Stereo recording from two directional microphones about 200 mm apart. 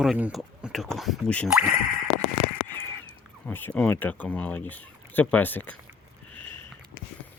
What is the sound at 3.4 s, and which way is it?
Speech, 10° left (ahead or behind).